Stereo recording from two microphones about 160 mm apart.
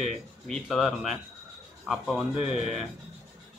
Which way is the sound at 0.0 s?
Centre (ahead or behind).